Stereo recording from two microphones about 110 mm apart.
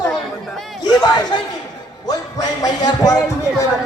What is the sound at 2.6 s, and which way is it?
Speech, 35° left (ahead or behind).